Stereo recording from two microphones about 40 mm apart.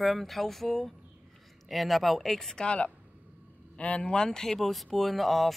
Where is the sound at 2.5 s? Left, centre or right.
Left.